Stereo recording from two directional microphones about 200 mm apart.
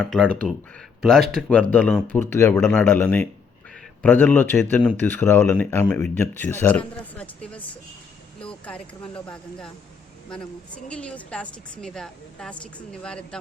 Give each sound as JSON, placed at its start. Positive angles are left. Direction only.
{"t": 0.0, "sound": "a woman's voice", "side_deg": 0}
{"t": 10.8, "sound": "a woman's voice", "side_deg": 5}